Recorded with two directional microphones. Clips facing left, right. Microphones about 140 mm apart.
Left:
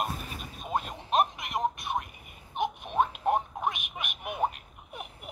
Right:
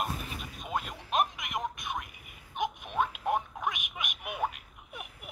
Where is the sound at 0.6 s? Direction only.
35° left (ahead or behind).